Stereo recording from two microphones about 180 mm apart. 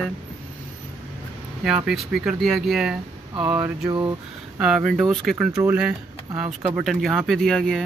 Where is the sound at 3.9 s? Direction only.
25° right (ahead or behind).